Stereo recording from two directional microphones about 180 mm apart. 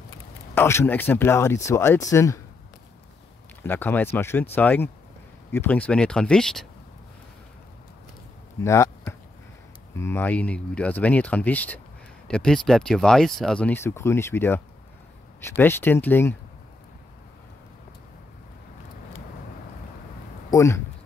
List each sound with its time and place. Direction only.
0.6 s speech: 15° left (ahead or behind)
3.6 s speech: 10° left (ahead or behind)
8.6 s speech: 15° left (ahead or behind)
20.5 s speech: 15° left (ahead or behind)